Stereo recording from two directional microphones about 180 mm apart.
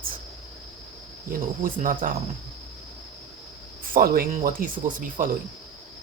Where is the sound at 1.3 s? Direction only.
50° right (ahead or behind).